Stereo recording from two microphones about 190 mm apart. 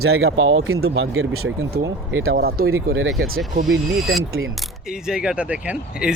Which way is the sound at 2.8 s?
80° right.